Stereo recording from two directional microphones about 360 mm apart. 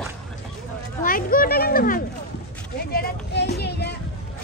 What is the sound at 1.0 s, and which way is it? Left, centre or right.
Speech, left.